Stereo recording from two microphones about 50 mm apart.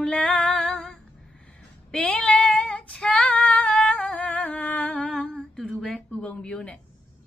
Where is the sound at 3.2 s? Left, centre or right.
Left.